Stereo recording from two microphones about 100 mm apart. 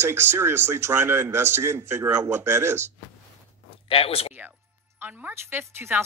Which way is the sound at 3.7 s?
70° left (ahead or behind).